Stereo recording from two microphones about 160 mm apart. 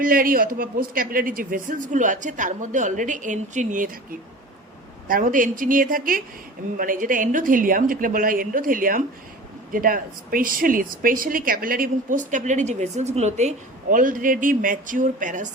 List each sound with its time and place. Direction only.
0.0 s speech: 65° right (ahead or behind)